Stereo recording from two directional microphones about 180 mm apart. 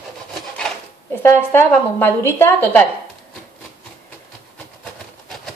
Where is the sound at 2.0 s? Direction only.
10° left (ahead or behind).